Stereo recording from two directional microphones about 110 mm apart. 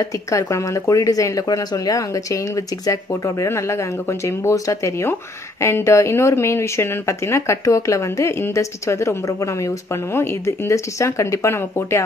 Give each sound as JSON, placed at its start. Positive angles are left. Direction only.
{"t": 0.0, "sound": "speech", "side_deg": 30}